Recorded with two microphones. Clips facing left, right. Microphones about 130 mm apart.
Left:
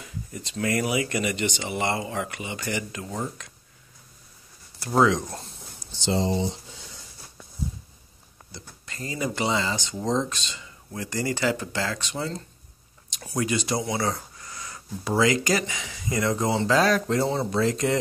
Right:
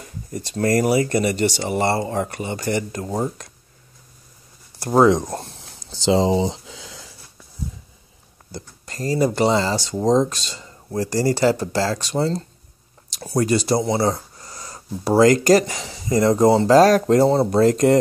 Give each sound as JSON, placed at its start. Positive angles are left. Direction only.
{"t": 0.0, "sound": "speech", "side_deg": -40}
{"t": 4.8, "sound": "speech", "side_deg": -45}
{"t": 5.9, "sound": "a sound", "side_deg": -90}
{"t": 8.5, "sound": "speech", "side_deg": -40}